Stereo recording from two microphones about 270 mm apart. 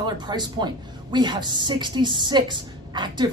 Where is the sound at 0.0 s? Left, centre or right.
Centre.